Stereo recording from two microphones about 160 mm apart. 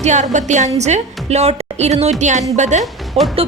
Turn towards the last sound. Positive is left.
turn(degrees=-40)  # may be behind; listen again after turning